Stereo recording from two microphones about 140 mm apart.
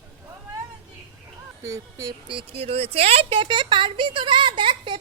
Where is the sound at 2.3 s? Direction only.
40° right (ahead or behind).